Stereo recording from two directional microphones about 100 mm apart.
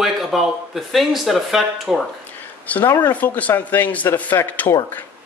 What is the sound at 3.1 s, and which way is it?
Speech, 15° left (ahead or behind).